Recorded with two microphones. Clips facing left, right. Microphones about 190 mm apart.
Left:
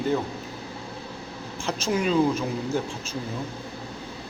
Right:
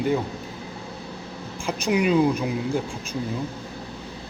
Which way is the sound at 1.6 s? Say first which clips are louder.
Right 3 dB; 10° right (ahead or behind).